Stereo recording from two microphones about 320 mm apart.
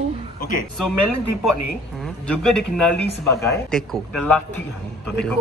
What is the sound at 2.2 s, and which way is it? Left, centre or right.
Speech, centre.